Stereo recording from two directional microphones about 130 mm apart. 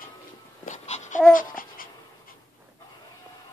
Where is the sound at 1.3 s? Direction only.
90° left.